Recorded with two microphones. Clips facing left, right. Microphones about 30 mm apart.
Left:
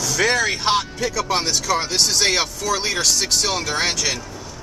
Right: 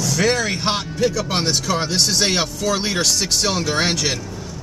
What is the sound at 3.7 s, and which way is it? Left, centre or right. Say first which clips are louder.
Speech: right 2 dB; centre.